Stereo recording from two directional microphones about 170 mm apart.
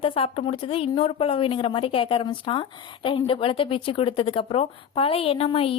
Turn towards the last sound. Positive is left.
turn(degrees=35)  # may be behind; listen again after turning